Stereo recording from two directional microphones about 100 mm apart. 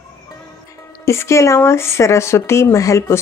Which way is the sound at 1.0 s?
30° left (ahead or behind).